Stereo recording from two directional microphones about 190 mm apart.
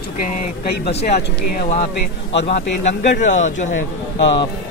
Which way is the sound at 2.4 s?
35° left (ahead or behind).